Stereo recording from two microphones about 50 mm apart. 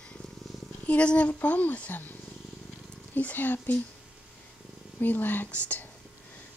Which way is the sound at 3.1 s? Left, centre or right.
Left.